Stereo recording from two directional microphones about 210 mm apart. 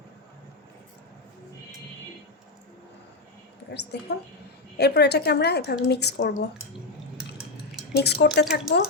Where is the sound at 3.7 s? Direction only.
50° left (ahead or behind).